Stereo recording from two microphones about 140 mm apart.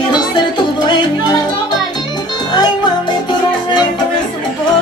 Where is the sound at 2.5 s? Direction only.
30° left (ahead or behind).